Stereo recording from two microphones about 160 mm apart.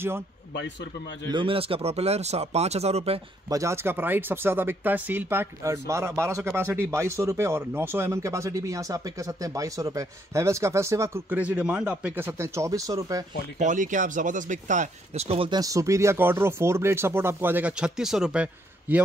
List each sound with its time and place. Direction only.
1.3 s speech: 35° right (ahead or behind)
3.4 s speech: 20° right (ahead or behind)
13.6 s speech: 50° right (ahead or behind); by 15.6 s 35° right (ahead or behind)
15.6 s speech: 20° right (ahead or behind)